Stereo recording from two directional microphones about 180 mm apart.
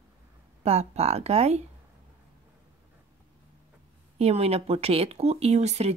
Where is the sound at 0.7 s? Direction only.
35° right (ahead or behind).